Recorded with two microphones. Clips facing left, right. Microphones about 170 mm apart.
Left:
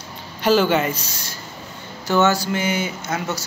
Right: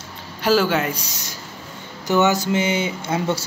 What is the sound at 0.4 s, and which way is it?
Speech, 5° right (ahead or behind).